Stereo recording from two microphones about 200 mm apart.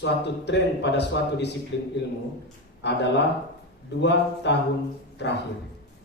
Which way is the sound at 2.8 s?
60° left (ahead or behind).